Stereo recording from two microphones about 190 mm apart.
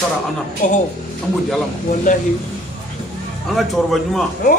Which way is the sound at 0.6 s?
40° left (ahead or behind).